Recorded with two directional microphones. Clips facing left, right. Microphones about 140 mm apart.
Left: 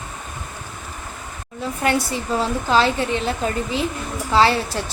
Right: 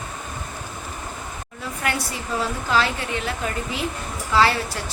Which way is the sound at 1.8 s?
30° left (ahead or behind).